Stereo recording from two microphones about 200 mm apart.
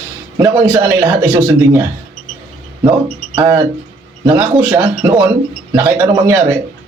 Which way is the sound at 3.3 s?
15° right (ahead or behind).